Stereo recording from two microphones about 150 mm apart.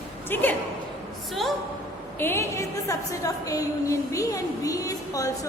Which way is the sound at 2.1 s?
15° left (ahead or behind).